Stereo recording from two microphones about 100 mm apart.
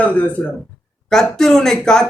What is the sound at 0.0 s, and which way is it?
Speech, 15° left (ahead or behind).